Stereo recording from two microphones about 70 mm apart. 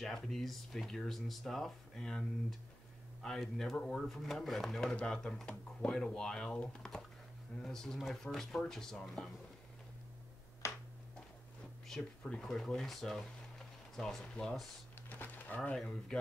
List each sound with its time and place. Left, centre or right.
0.0 s speech: centre
11.9 s speech: centre
15.0 s music: left
16.1 s speech: centre